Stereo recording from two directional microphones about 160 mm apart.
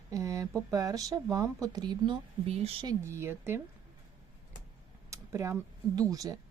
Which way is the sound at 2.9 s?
15° right (ahead or behind).